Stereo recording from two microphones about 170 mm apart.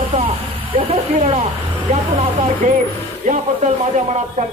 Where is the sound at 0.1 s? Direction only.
30° right (ahead or behind).